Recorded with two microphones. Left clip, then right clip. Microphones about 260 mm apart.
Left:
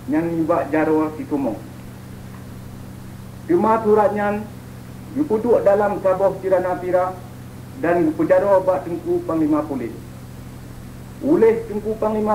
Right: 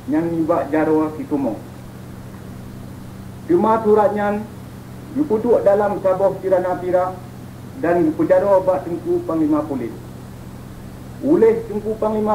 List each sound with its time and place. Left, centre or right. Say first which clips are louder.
0.1 s a man's voice: right 1 dB; right
3.4 s a man's voice: right 1 dB; right
11.2 s a man's voice: right 1 dB; right